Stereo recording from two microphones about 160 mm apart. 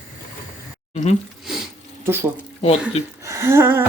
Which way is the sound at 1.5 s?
5° right (ahead or behind).